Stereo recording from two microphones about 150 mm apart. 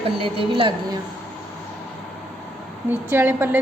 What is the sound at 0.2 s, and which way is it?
Speech, 35° right (ahead or behind).